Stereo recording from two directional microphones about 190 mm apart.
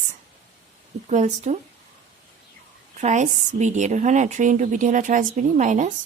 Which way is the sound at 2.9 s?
40° right (ahead or behind).